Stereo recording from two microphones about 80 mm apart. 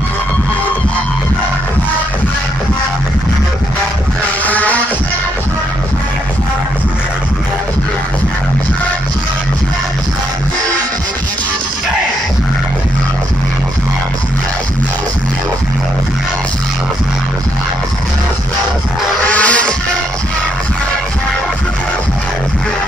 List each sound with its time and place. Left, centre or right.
4.5 s music: centre
19.2 s music: centre